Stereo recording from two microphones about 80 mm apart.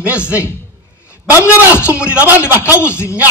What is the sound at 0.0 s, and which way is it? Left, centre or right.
Speech, centre.